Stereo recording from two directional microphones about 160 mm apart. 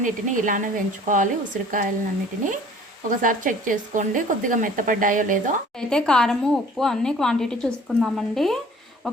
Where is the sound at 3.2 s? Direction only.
55° right (ahead or behind).